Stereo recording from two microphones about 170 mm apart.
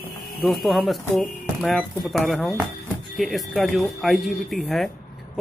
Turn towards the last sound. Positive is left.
turn(degrees=0)  # may be behind; listen again after turning